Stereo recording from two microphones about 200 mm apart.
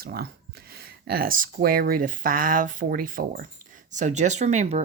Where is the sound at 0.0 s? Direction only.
50° right (ahead or behind).